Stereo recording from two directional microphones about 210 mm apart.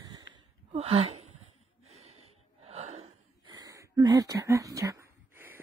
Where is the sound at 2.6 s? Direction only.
30° right (ahead or behind).